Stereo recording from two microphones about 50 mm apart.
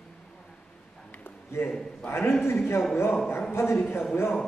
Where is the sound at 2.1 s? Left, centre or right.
Left.